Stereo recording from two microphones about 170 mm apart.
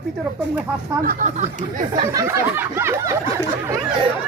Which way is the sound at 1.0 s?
60° right (ahead or behind).